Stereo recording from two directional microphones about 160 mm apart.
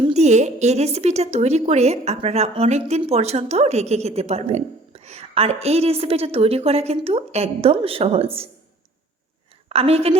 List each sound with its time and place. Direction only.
0.0 s a woman's voice: 45° right (ahead or behind)
9.6 s a woman's voice: 40° right (ahead or behind)